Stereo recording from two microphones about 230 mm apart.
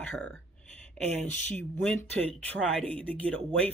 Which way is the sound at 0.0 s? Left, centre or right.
Centre.